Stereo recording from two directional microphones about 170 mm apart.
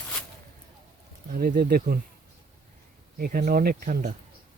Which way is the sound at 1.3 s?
60° right (ahead or behind).